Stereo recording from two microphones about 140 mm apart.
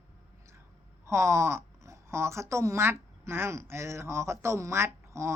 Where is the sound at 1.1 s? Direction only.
20° right (ahead or behind).